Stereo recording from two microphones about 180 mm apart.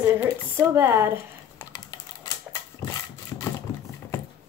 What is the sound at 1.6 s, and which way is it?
Typing, 20° left (ahead or behind).